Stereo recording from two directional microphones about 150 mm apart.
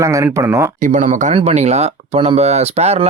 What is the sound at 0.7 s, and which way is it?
Speech, 60° right (ahead or behind).